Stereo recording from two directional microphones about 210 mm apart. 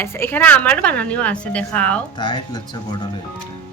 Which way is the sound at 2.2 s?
20° left (ahead or behind).